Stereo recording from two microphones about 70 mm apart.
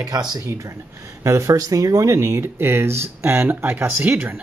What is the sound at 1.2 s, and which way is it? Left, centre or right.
Speech, right.